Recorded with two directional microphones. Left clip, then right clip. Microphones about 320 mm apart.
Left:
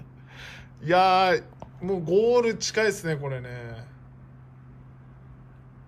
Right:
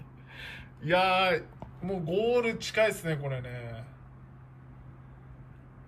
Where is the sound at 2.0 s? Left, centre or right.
Left.